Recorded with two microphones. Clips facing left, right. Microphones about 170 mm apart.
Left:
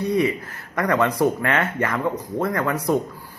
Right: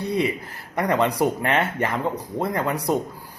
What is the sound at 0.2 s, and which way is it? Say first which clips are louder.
Speech: left 2 dB; 20° right (ahead or behind).